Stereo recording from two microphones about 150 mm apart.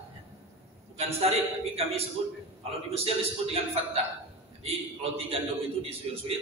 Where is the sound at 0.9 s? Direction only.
40° right (ahead or behind).